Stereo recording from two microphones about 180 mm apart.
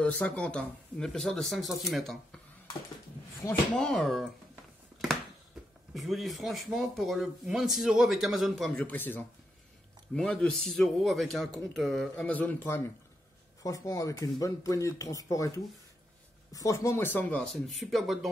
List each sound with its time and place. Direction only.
0.0 s speech: 5° left (ahead or behind)
3.7 s speech: 5° left (ahead or behind)
5.9 s speech: centre (ahead or behind)